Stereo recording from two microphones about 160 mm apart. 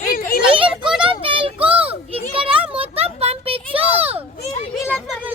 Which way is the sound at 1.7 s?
35° right (ahead or behind).